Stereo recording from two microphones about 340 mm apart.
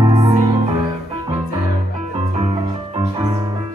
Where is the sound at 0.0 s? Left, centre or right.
Centre.